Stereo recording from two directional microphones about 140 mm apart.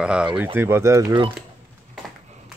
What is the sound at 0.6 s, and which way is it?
Speech, 15° right (ahead or behind).